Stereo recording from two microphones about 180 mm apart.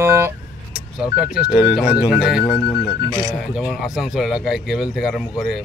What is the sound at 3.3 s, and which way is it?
Speech, 5° right (ahead or behind).